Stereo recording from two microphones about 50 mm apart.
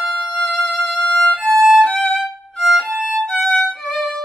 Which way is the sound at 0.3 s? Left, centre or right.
Left.